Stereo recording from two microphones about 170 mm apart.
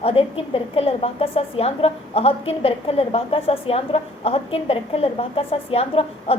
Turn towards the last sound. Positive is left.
turn(degrees=35)  # may be behind; listen again after turning